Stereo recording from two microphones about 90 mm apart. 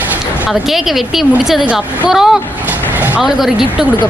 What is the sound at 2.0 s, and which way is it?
Speech, 5° right (ahead or behind).